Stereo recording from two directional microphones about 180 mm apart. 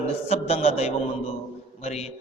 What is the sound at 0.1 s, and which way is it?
A man's voice, 35° left (ahead or behind).